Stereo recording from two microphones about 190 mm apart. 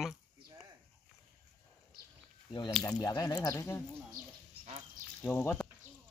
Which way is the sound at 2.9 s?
20° left (ahead or behind).